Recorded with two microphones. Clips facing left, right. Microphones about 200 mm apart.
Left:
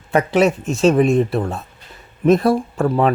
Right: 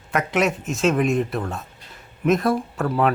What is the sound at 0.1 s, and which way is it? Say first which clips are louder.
Speech: left 6 dB; 30° left (ahead or behind).